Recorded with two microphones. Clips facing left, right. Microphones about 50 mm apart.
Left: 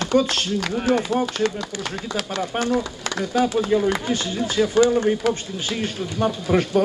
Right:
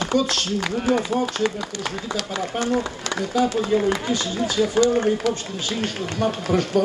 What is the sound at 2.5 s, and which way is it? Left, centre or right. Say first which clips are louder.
Speech: left 1 dB; left.